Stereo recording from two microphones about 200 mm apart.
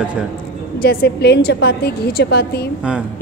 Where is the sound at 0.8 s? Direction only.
55° left (ahead or behind).